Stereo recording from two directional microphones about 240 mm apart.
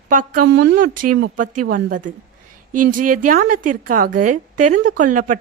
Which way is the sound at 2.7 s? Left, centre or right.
Right.